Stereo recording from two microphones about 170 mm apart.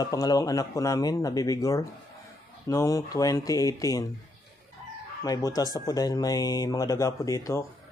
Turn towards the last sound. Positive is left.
turn(degrees=20)  # may be behind; listen again after turning